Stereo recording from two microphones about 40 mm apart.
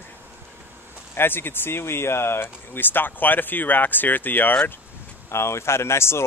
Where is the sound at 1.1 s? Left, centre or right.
Left.